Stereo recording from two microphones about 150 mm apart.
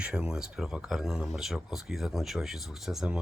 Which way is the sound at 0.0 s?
5° right (ahead or behind).